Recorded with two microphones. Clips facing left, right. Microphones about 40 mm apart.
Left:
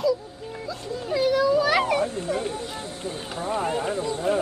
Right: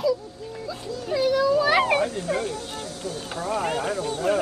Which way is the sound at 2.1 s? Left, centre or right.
Right.